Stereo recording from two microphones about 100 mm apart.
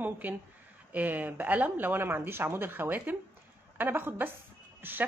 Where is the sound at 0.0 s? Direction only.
15° right (ahead or behind).